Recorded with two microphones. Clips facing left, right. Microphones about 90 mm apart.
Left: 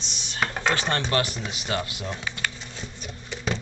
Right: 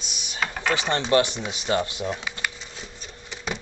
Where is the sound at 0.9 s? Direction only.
20° right (ahead or behind).